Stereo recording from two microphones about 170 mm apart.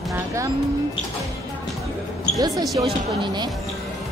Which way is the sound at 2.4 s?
20° right (ahead or behind).